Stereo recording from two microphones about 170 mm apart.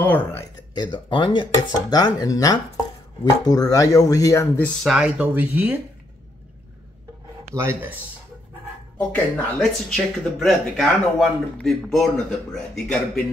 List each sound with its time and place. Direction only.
0.0 s speech: 10° left (ahead or behind)
0.7 s speech: 30° left (ahead or behind)
4.8 s speech: 5° right (ahead or behind)
7.5 s speech: 15° right (ahead or behind)
8.9 s a man's voice: 5° left (ahead or behind)